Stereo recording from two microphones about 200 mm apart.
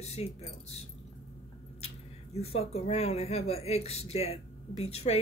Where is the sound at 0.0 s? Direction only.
30° left (ahead or behind).